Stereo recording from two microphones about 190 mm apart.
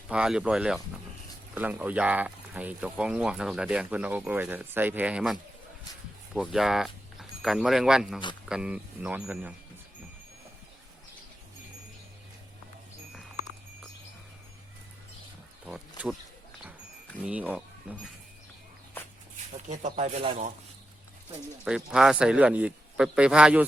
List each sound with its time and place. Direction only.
0.1 s a man's voice: 5° right (ahead or behind)
15.6 s wild animals: 5° right (ahead or behind)
17.2 s speech: 5° right (ahead or behind)
19.6 s speech: 40° right (ahead or behind)
21.6 s a man's voice: 5° right (ahead or behind)